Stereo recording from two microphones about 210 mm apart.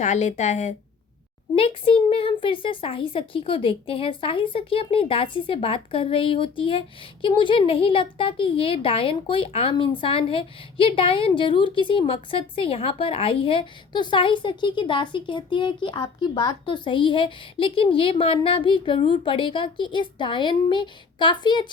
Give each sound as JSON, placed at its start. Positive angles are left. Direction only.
{"t": 0.0, "sound": "a woman's voice", "side_deg": 35}